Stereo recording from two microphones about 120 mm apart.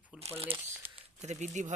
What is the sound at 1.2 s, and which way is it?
Speech, 80° right.